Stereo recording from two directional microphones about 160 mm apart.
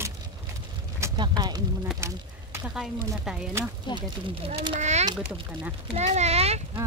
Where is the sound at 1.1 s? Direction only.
25° right (ahead or behind).